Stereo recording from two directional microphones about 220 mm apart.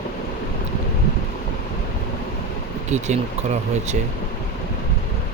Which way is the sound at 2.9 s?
30° right (ahead or behind).